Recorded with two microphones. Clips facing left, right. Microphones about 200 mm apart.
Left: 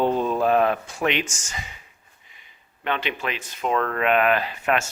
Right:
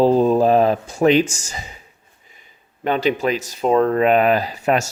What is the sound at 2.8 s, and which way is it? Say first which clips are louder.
Speech: right 9 dB; 40° right (ahead or behind).